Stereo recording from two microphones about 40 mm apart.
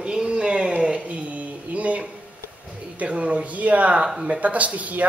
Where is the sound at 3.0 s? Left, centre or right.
Right.